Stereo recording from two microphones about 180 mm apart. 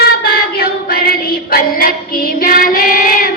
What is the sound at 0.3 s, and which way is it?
Child singing, 55° left (ahead or behind).